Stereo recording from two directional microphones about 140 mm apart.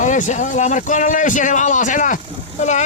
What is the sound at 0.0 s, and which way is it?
A man's voice, 60° left (ahead or behind).